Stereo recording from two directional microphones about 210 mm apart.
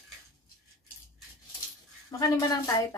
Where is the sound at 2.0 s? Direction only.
15° left (ahead or behind).